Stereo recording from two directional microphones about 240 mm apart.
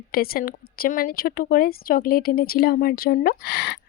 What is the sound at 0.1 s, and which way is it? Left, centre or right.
Speech, left.